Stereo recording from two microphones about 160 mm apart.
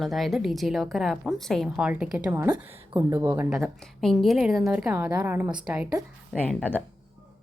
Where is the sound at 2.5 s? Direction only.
30° right (ahead or behind).